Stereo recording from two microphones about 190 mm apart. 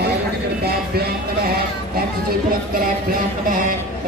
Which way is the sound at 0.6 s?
55° right (ahead or behind).